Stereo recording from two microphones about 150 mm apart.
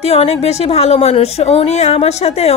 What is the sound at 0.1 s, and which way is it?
A woman's voice, 45° left (ahead or behind).